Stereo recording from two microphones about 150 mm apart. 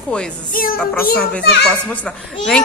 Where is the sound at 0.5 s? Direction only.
70° left (ahead or behind).